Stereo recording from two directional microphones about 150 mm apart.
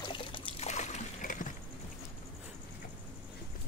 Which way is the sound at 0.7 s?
50° left (ahead or behind).